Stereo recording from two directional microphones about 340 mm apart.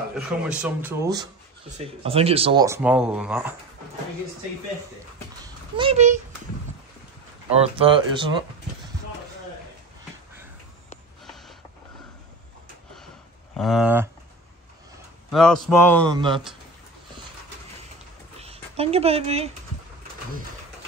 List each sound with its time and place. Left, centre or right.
0.5 s speech: centre
5.8 s speech: centre
7.4 s speech: centre
13.6 s speech: centre
15.3 s speech: centre
16.2 s speech: centre
18.4 s speech: centre